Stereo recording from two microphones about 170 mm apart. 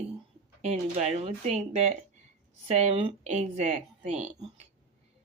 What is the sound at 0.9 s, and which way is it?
Speech, 40° right (ahead or behind).